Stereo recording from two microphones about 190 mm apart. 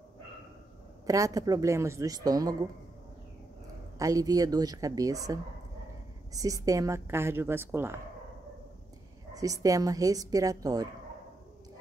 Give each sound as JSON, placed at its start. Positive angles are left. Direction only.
{"t": 1.0, "sound": "a woman's voice", "side_deg": -15}
{"t": 4.0, "sound": "a woman's voice", "side_deg": -20}
{"t": 9.3, "sound": "speech", "side_deg": -20}